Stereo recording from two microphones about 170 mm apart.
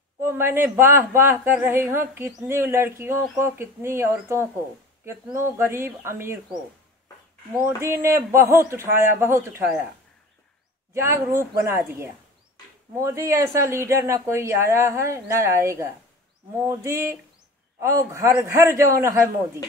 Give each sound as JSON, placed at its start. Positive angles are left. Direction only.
{"t": 0.2, "sound": "speech", "side_deg": -15}
{"t": 7.5, "sound": "speech", "side_deg": -15}
{"t": 10.9, "sound": "speech", "side_deg": -15}